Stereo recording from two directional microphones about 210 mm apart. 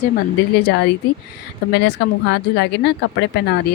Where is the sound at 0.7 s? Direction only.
50° left (ahead or behind).